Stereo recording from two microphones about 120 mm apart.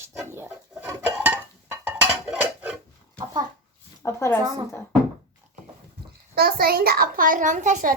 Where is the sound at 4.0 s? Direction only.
20° left (ahead or behind).